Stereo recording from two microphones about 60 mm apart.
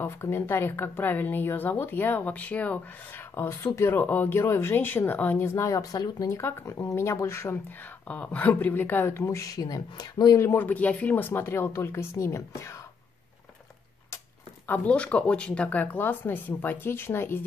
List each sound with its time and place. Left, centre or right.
0.0 s speech: left
3.4 s speech: left
3.9 s speech: left
5.7 s speech: left
6.3 s speech: left
8.1 s speech: left
10.6 s speech: left
14.9 s speech: left